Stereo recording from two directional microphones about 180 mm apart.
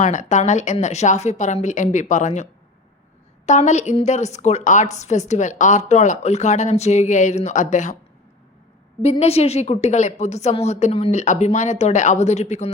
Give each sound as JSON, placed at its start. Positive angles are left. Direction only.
{"t": 0.0, "sound": "a woman's voice", "side_deg": 45}
{"t": 9.0, "sound": "a woman's voice", "side_deg": 35}